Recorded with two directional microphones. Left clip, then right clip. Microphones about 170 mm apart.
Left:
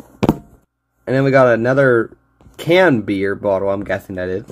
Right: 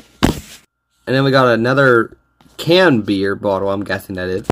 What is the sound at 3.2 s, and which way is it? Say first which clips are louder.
Speech: left 3 dB; 20° right (ahead or behind).